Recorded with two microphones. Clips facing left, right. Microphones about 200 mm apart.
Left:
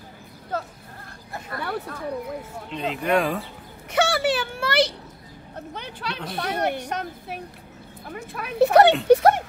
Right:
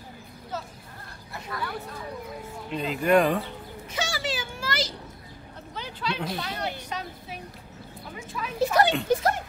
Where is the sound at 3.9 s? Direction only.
60° left (ahead or behind).